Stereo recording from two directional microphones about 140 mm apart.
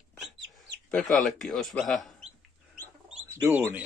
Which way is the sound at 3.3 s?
15° right (ahead or behind).